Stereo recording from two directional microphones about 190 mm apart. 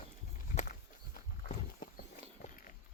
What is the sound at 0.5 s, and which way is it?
Walk, 40° left (ahead or behind).